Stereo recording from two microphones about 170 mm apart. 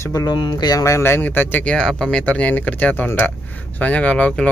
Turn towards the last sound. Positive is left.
turn(degrees=10)  # may be behind; listen again after turning